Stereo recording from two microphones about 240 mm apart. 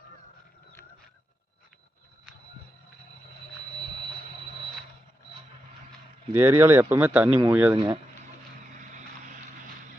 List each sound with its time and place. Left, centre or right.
6.3 s speech: centre
8.8 s vehicle: right